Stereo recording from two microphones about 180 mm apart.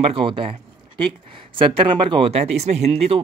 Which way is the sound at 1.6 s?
25° right (ahead or behind).